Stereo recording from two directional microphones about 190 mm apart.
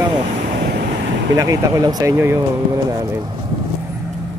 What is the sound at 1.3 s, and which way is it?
Speech, 20° right (ahead or behind).